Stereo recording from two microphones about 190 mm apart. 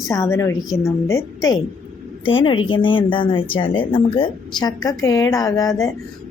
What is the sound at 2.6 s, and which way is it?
Speech, 25° left (ahead or behind).